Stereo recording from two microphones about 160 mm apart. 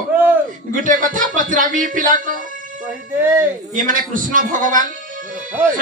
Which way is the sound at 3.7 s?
55° right (ahead or behind).